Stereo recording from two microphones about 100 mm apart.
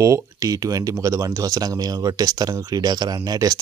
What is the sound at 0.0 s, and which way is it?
Speech, 35° right (ahead or behind).